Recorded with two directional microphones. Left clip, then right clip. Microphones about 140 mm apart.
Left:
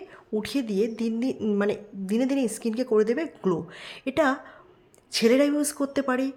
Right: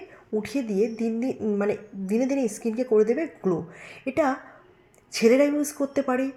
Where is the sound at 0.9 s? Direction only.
50° left (ahead or behind).